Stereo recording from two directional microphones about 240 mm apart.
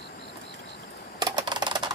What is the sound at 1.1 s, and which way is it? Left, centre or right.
Computer keyboard, centre.